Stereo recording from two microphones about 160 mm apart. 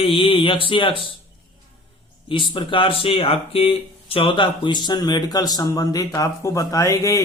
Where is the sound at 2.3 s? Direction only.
30° left (ahead or behind).